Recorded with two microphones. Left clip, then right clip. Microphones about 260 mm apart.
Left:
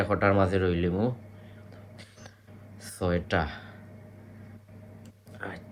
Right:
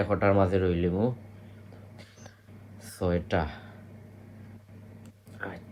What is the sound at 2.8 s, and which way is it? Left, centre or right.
Speech, left.